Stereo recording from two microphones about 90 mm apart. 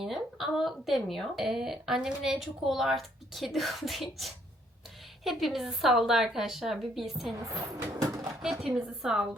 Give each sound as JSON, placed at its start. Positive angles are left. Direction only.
{"t": 0.0, "sound": "speech", "side_deg": -5}
{"t": 8.0, "sound": "a sound", "side_deg": -40}
{"t": 8.4, "sound": "speech", "side_deg": 0}